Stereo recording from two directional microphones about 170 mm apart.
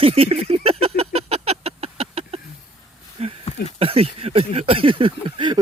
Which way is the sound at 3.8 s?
35° right (ahead or behind).